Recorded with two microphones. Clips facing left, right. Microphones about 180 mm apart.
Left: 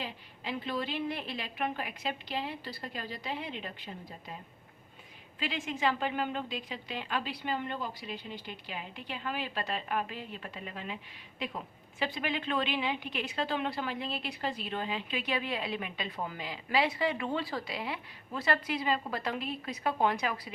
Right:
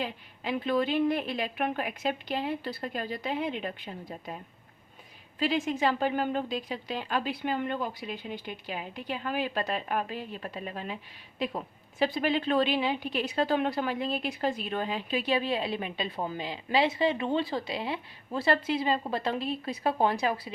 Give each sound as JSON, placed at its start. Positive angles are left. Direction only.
{"t": 0.0, "sound": "a woman's voice", "side_deg": -50}
{"t": 5.4, "sound": "a woman's voice", "side_deg": -40}